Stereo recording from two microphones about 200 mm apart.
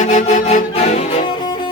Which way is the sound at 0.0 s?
35° left (ahead or behind).